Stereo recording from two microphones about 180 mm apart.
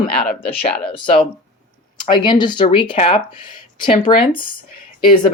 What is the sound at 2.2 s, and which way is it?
Speech, 25° left (ahead or behind).